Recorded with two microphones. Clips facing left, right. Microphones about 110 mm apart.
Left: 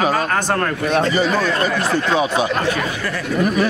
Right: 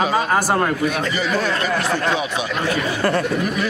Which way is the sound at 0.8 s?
35° left (ahead or behind).